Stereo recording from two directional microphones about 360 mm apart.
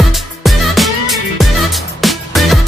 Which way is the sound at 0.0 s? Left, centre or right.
Centre.